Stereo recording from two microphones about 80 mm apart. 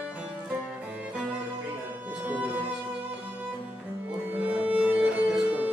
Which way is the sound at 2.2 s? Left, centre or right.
Centre.